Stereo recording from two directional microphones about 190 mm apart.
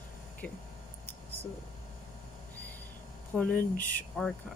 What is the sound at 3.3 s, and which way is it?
Speech, 5° left (ahead or behind).